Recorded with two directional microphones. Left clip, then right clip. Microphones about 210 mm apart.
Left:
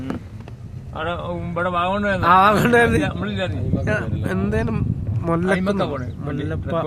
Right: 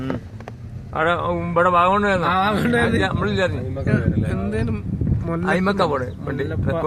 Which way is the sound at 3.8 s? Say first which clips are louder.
Even; 50° left (ahead or behind).